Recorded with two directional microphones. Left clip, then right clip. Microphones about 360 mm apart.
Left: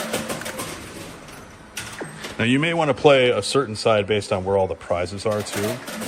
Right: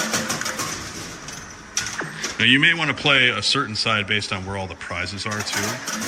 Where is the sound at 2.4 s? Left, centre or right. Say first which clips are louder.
Right 4 dB; centre.